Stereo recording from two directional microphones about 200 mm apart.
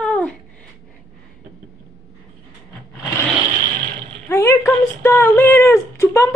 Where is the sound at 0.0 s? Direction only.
5° left (ahead or behind).